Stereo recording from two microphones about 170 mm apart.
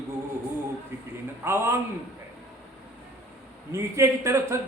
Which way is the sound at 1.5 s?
15° right (ahead or behind).